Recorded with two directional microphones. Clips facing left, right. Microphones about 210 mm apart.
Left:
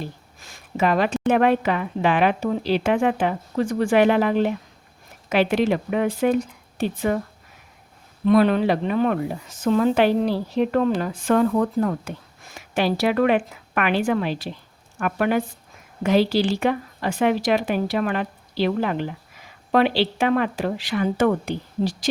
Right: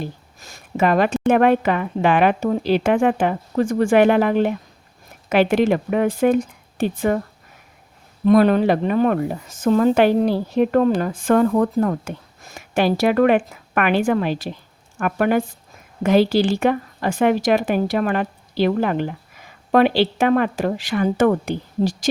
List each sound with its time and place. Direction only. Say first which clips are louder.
0.3 s speech: right 3 dB; 40° right (ahead or behind)
8.2 s speech: right 3 dB; 45° right (ahead or behind)